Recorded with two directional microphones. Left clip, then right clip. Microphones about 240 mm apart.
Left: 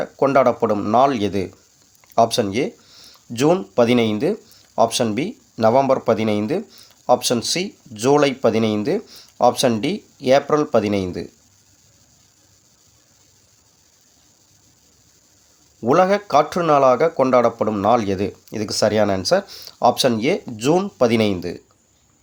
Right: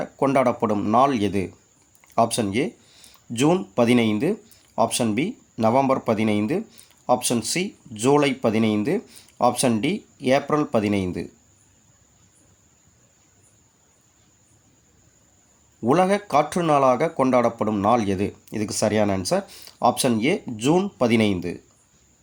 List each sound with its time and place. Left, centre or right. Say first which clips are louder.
0.0 s speech: left 5 dB; centre
15.8 s speech: left 4 dB; centre